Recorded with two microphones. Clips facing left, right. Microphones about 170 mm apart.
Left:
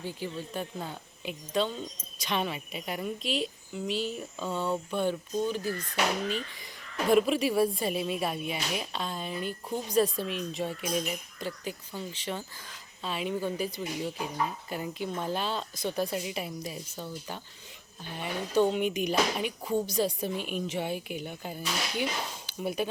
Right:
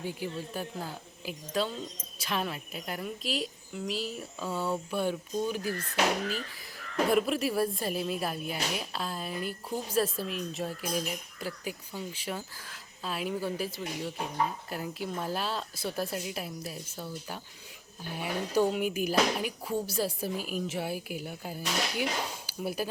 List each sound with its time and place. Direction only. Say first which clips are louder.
0.0 s a woman's voice: right 1 dB; 10° right (ahead or behind)
7.1 s a woman's voice: left 5 dB; centre (ahead or behind)